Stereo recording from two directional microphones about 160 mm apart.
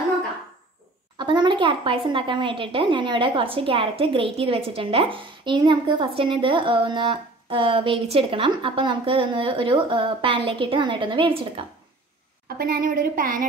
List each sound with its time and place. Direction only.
1.1 s a woman's voice: 30° right (ahead or behind)
12.4 s a woman's voice: 70° right (ahead or behind)